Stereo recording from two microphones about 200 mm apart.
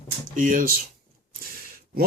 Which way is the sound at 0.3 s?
40° right (ahead or behind).